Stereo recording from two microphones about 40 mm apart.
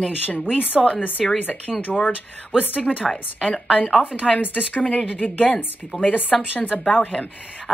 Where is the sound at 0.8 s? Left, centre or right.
Centre.